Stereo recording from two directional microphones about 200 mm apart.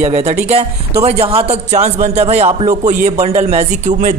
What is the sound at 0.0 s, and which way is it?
A man's voice, 35° right (ahead or behind).